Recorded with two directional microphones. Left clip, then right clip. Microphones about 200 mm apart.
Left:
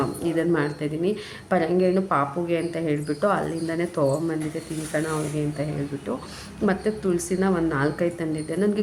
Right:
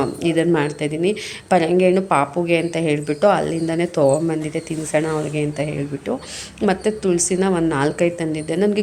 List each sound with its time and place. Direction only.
0.0 s a woman's voice: 15° right (ahead or behind)